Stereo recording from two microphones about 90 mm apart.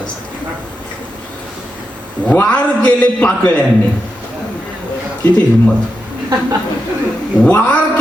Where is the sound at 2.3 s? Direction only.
15° left (ahead or behind).